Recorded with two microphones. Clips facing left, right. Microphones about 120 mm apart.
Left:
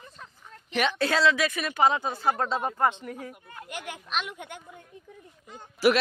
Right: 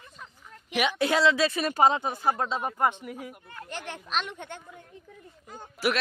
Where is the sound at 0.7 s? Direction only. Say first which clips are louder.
Even; 10° right (ahead or behind); by 2.0 s 30° right (ahead or behind).